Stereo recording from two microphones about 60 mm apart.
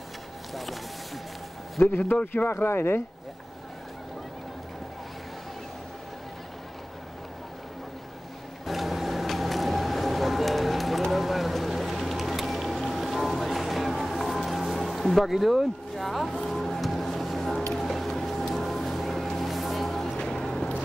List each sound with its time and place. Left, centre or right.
0.6 s a sound: centre
1.8 s a man's voice: left
8.6 s vehicle: centre
16.4 s music: centre